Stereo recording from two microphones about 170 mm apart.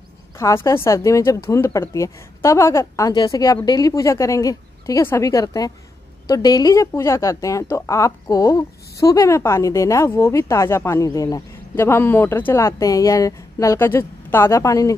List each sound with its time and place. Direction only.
0.4 s a woman's voice: 15° left (ahead or behind)